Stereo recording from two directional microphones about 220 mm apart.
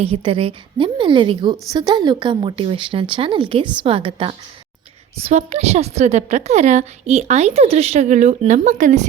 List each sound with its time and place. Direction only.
0.0 s a woman's voice: 25° right (ahead or behind)